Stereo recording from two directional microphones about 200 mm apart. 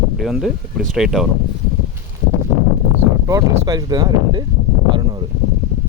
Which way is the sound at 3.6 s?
20° right (ahead or behind).